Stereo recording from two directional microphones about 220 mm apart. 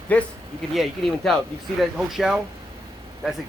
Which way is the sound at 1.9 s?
Centre (ahead or behind).